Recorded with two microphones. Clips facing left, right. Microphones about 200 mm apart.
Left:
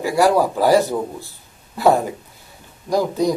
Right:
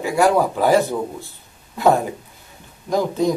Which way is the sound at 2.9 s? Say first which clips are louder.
Left 1 dB; 15° left (ahead or behind).